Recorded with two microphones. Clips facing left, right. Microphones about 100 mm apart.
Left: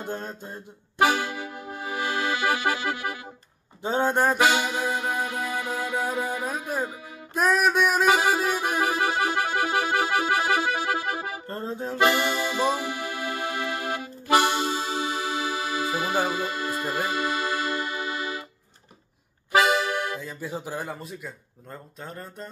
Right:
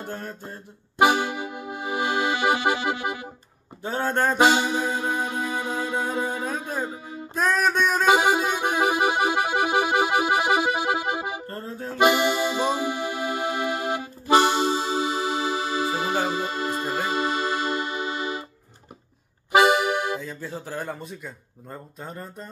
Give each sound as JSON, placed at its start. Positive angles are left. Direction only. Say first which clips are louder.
{"t": 0.0, "sound": "mantra", "louder": "left 1 dB", "side_deg": 20}
{"t": 0.9, "sound": "accordion", "louder": "right 3 dB", "side_deg": -20}
{"t": 3.8, "sound": "mantra", "louder": "left 2 dB", "side_deg": 20}
{"t": 4.4, "sound": "music", "louder": "right 3 dB", "side_deg": -25}
{"t": 6.4, "sound": "speech", "louder": "even", "side_deg": 10}
{"t": 6.9, "sound": "speech", "louder": "right 5 dB", "side_deg": -30}
{"t": 7.3, "sound": "music", "louder": "left 1 dB", "side_deg": 5}
{"t": 8.1, "sound": "music", "louder": "right 2 dB", "side_deg": -20}
{"t": 11.4, "sound": "music", "louder": "left 2 dB", "side_deg": 20}
{"t": 12.0, "sound": "music", "louder": "right 3 dB", "side_deg": -20}
{"t": 19.5, "sound": "accordion", "louder": "right 3 dB", "side_deg": -20}
{"t": 20.2, "sound": "music", "louder": "right 2 dB", "side_deg": 0}
{"t": 20.4, "sound": "speech", "louder": "left 3 dB", "side_deg": 15}
{"t": 22.0, "sound": "music", "louder": "even", "side_deg": -5}